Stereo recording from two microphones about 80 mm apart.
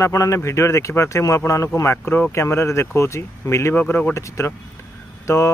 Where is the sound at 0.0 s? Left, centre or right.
Left.